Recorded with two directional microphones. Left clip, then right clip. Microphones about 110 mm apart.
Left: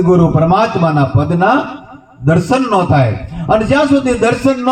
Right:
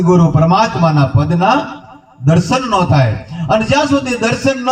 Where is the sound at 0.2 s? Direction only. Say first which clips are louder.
Left 1 dB; 15° left (ahead or behind).